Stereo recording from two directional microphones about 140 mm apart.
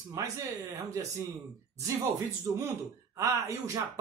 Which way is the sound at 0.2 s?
25° right (ahead or behind).